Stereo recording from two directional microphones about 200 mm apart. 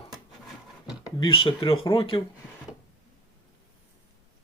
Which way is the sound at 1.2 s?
25° left (ahead or behind).